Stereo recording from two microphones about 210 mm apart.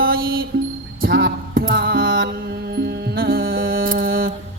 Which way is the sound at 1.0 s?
45° right (ahead or behind).